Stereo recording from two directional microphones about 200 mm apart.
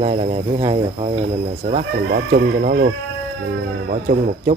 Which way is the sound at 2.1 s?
50° right (ahead or behind).